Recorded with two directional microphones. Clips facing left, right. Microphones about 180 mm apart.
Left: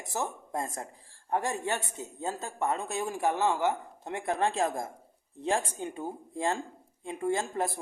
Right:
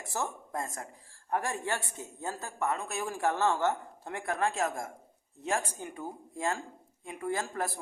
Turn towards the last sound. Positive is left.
turn(degrees=25)  # may be behind; listen again after turning